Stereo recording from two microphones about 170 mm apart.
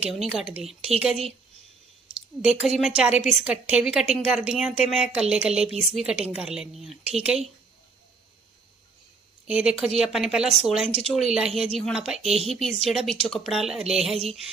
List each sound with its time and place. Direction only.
0.0 s a woman's voice: centre (ahead or behind)
2.4 s a woman's voice: centre (ahead or behind)
9.5 s a woman's voice: 5° right (ahead or behind)